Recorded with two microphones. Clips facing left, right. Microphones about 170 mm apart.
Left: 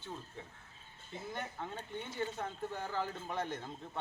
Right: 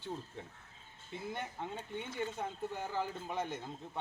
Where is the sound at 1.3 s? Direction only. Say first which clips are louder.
Left 1 dB; 15° right (ahead or behind).